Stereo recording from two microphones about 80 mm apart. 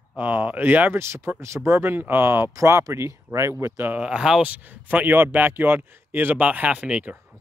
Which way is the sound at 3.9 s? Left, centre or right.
Centre.